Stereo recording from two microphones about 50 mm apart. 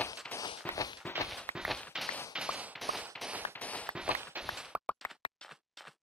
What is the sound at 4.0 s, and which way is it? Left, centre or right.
Walk, right.